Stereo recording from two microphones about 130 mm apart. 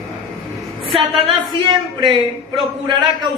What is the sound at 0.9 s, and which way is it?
Speech, 45° right (ahead or behind).